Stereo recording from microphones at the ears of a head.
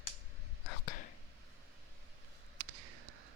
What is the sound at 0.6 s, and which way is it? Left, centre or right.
Whispering, left.